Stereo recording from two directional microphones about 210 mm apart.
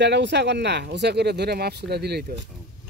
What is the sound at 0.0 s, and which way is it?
Speech, 55° right (ahead or behind).